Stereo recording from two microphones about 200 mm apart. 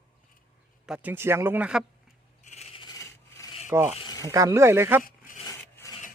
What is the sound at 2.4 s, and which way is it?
Rub, 35° left (ahead or behind).